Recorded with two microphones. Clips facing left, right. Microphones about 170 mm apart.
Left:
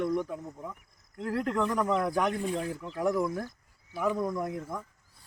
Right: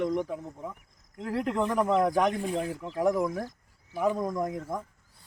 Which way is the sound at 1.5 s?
25° right (ahead or behind).